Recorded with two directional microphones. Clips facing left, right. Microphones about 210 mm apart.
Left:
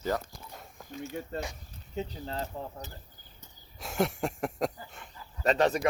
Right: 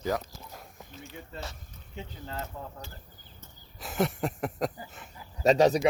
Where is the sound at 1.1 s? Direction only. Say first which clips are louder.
Left 8 dB; 45° left (ahead or behind).